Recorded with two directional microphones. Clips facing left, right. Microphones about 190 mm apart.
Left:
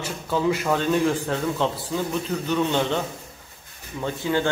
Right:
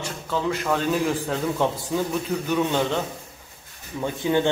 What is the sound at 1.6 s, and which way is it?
A man's voice, 15° right (ahead or behind).